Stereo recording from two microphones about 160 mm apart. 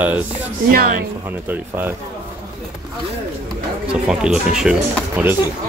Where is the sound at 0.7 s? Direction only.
65° right (ahead or behind).